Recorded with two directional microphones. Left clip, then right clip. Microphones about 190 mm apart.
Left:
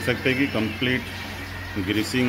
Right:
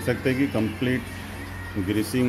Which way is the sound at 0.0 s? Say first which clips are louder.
Left 2 dB; 15° right (ahead or behind).